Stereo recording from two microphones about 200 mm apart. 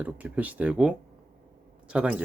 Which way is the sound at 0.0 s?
5° right (ahead or behind).